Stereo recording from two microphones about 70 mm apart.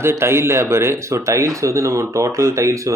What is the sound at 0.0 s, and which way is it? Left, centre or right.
Speech, right.